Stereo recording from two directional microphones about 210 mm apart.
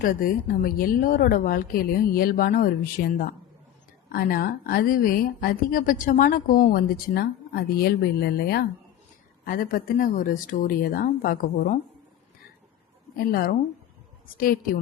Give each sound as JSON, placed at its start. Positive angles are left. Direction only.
{"t": 0.0, "sound": "a woman's voice", "side_deg": 40}
{"t": 13.1, "sound": "a woman's voice", "side_deg": 45}